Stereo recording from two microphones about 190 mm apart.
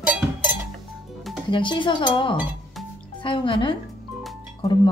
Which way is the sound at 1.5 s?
25° left (ahead or behind).